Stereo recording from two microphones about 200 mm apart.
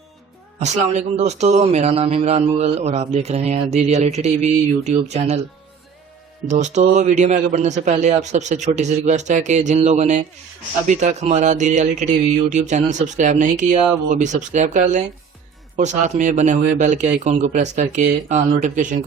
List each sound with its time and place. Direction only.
0.6 s a man's voice: 35° right (ahead or behind)
6.5 s a man's voice: 35° right (ahead or behind)